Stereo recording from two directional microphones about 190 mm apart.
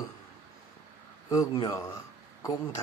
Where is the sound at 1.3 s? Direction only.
20° left (ahead or behind).